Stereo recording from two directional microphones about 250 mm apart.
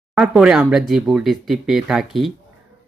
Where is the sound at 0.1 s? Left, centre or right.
Centre.